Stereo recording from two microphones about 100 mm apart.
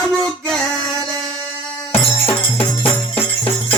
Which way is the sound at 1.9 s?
20° left (ahead or behind).